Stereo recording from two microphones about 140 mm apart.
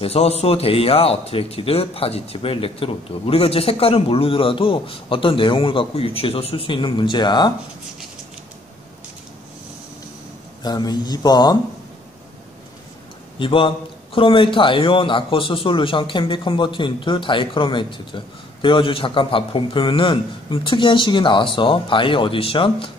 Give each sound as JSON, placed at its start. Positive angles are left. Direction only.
{"t": 0.0, "sound": "a man's voice", "side_deg": 45}
{"t": 10.6, "sound": "speech", "side_deg": 30}
{"t": 13.4, "sound": "a man's voice", "side_deg": 40}